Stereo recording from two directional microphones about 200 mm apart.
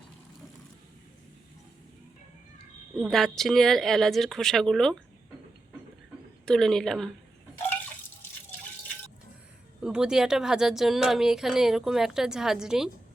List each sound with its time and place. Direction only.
2.9 s speech: centre (ahead or behind)
6.4 s speech: centre (ahead or behind)
9.8 s speech: 5° right (ahead or behind)